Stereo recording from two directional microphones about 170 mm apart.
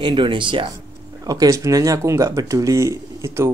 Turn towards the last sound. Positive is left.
turn(degrees=-15)  # may be behind; listen again after turning